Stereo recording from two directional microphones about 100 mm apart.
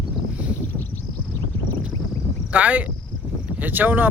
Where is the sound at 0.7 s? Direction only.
20° left (ahead or behind).